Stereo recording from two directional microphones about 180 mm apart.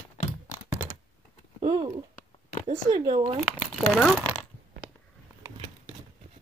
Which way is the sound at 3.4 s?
Centre (ahead or behind).